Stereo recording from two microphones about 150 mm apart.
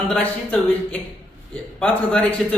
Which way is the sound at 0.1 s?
10° left (ahead or behind).